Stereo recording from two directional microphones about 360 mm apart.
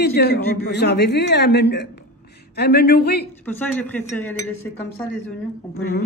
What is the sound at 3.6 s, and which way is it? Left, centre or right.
A woman's voice, centre.